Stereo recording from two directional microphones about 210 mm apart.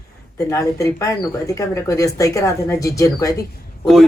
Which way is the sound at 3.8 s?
Centre (ahead or behind).